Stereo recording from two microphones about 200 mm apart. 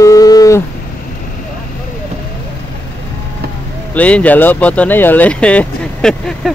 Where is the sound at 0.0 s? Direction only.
15° left (ahead or behind).